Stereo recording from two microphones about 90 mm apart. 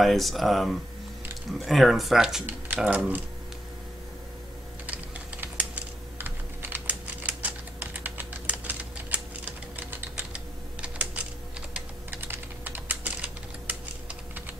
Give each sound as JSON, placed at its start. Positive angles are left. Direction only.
{"t": 0.0, "sound": "speech", "side_deg": 0}
{"t": 2.4, "sound": "speech", "side_deg": -20}
{"t": 4.8, "sound": "typing", "side_deg": -15}
{"t": 12.1, "sound": "typing", "side_deg": -25}